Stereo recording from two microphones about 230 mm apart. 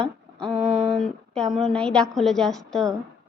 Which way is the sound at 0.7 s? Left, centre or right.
Right.